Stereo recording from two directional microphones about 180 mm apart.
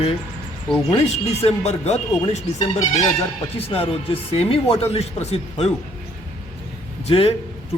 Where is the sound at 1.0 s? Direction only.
35° left (ahead or behind).